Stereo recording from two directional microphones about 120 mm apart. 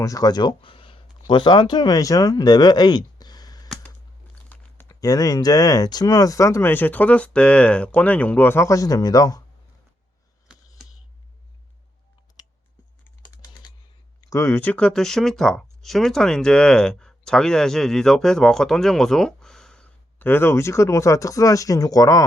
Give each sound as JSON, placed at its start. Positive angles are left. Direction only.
{"t": 0.0, "sound": "speech", "side_deg": 30}
{"t": 4.4, "sound": "crumpling", "side_deg": 15}
{"t": 4.9, "sound": "speech", "side_deg": 30}
{"t": 10.5, "sound": "a sound", "side_deg": -5}
{"t": 14.2, "sound": "speech", "side_deg": 25}